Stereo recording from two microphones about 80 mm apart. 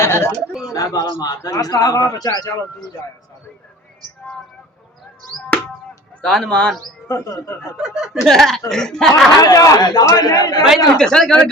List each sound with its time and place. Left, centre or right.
0.0 s a sound: left
0.7 s speech: left
1.4 s a man's voice: left
1.7 s a man's voice: left
5.3 s speech: centre
6.5 s speech: centre
7.1 s speech: left
7.6 s speech: centre
9.4 s a man's voice: left
10.9 s speech: centre